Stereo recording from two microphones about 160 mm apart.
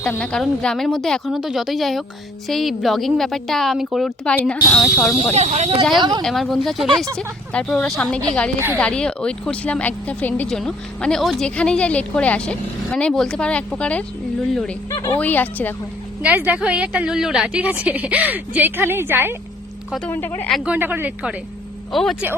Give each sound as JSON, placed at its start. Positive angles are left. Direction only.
{"t": 0.0, "sound": "a woman's voice", "side_deg": 5}
{"t": 4.4, "sound": "speech", "side_deg": 10}
{"t": 5.3, "sound": "speech", "side_deg": -45}
{"t": 6.0, "sound": "speech", "side_deg": -25}
{"t": 6.2, "sound": "a woman's voice", "side_deg": 0}
{"t": 14.8, "sound": "speech", "side_deg": 20}
{"t": 16.2, "sound": "a woman's voice", "side_deg": -10}
{"t": 20.1, "sound": "speech", "side_deg": 10}
{"t": 20.7, "sound": "a woman's voice", "side_deg": -10}